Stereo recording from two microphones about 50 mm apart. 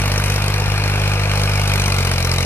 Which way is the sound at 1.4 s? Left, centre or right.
Left.